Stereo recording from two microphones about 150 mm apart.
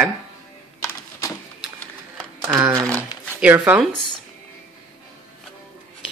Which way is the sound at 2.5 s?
20° right (ahead or behind).